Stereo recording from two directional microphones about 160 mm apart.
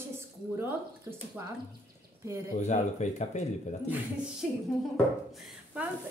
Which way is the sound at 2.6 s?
45° left (ahead or behind).